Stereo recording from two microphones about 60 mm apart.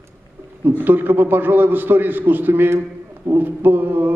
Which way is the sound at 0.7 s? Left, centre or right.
Right.